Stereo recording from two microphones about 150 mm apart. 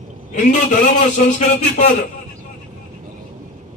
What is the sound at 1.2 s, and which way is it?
Speech, 50° left (ahead or behind).